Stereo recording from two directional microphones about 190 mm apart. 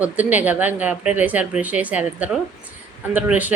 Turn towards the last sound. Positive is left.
turn(degrees=-10)  # may be behind; listen again after turning